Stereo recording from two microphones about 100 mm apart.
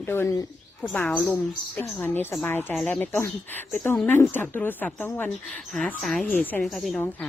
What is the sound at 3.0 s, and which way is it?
Speech, 20° left (ahead or behind).